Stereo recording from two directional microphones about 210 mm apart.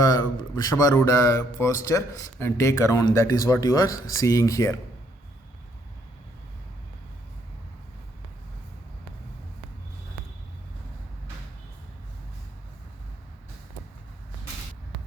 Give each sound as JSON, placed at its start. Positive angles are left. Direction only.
{"t": 0.5, "sound": "a man's voice", "side_deg": 15}